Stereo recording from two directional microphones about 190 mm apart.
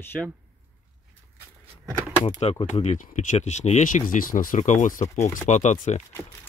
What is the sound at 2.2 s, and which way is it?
Speech, 35° left (ahead or behind).